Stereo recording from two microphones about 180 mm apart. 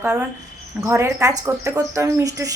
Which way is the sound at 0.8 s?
15° right (ahead or behind).